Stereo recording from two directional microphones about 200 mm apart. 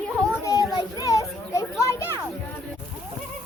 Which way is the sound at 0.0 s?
5° left (ahead or behind).